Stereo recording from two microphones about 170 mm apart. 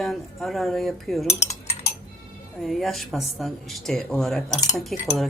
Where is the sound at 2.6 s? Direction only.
Centre (ahead or behind).